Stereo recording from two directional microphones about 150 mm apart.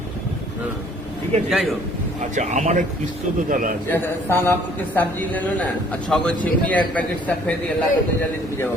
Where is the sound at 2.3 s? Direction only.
55° right (ahead or behind).